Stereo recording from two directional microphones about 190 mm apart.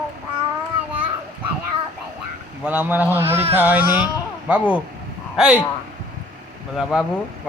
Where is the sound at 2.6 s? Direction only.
10° right (ahead or behind).